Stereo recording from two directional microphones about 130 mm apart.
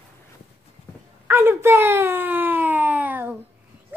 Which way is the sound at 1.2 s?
15° right (ahead or behind).